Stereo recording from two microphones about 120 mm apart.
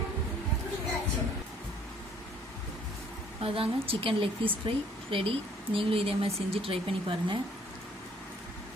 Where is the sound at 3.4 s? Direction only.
50° right (ahead or behind).